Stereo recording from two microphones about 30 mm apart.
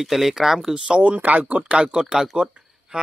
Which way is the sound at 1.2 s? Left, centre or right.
Right.